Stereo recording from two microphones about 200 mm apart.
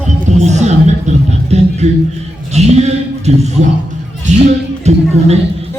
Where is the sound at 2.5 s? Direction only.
35° right (ahead or behind).